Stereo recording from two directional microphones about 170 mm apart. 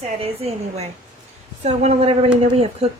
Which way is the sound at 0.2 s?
35° right (ahead or behind).